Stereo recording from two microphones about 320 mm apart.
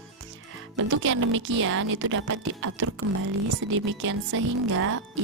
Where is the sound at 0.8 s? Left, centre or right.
Right.